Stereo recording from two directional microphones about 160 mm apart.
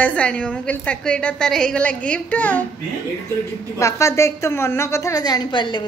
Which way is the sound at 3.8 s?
20° left (ahead or behind).